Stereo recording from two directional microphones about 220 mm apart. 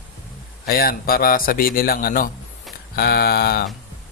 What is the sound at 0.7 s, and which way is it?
A man's voice, 45° left (ahead or behind).